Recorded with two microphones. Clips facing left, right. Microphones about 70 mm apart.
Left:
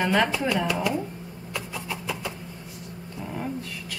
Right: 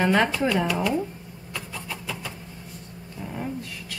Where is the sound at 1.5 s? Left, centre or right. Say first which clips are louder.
Left 2 dB; centre.